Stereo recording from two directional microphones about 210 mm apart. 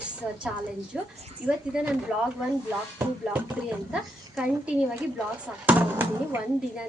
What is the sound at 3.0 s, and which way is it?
Speech, 5° right (ahead or behind).